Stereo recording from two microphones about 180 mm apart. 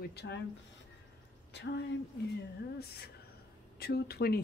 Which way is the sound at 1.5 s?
75° left (ahead or behind).